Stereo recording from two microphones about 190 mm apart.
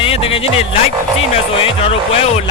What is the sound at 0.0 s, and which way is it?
Speech, 30° left (ahead or behind).